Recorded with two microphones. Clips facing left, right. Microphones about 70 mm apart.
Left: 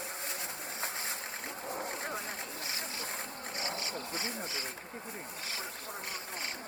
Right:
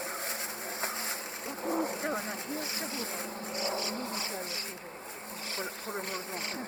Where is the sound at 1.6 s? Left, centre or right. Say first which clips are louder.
Right 8 dB; right.